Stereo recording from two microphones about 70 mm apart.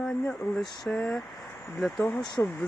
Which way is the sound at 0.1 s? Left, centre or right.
Centre.